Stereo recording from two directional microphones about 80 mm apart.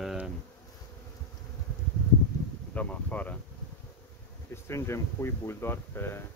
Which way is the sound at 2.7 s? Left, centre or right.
Centre.